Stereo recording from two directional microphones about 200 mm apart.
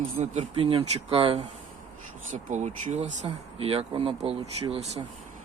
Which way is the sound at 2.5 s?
35° right (ahead or behind).